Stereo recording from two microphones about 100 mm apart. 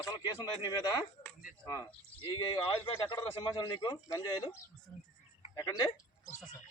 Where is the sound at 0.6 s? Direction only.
35° left (ahead or behind).